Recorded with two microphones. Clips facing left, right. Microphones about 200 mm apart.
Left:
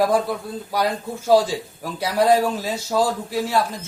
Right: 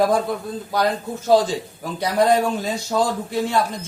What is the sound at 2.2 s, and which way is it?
A man's voice, 5° left (ahead or behind).